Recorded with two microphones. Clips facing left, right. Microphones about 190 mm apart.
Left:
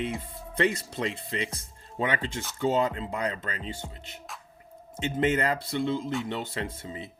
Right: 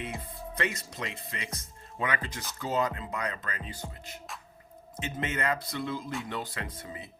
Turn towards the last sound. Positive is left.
turn(degrees=25)  # may be behind; listen again after turning